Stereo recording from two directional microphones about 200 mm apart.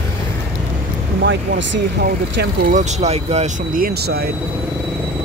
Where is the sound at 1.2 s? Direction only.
65° right (ahead or behind).